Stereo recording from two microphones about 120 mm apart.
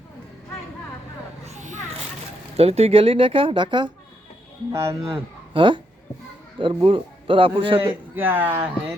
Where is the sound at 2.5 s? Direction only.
60° right (ahead or behind); by 3.9 s 40° right (ahead or behind).